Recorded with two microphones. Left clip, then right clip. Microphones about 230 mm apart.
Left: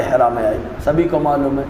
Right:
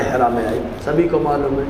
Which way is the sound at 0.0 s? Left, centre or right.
Left.